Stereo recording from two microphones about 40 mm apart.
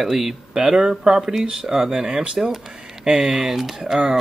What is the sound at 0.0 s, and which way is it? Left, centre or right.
Speech, centre.